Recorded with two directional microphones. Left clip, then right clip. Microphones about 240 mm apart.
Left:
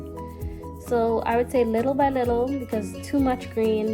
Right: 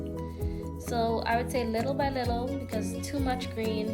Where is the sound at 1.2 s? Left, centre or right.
Left.